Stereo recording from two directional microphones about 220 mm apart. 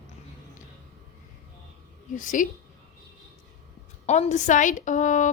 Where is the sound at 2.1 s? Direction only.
35° left (ahead or behind).